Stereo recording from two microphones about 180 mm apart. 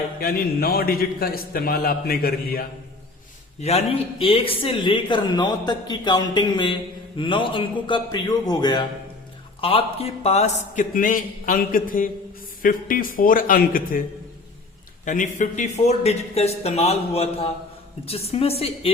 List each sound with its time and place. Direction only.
0.2 s a man's voice: 55° left (ahead or behind)
3.6 s a man's voice: 35° left (ahead or behind); by 14.0 s 50° left (ahead or behind)
15.0 s a man's voice: 45° left (ahead or behind)